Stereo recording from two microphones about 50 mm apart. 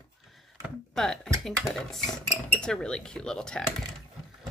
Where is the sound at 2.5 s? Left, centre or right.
Centre.